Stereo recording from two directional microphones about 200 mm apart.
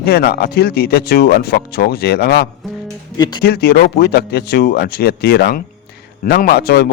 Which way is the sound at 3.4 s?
50° left (ahead or behind).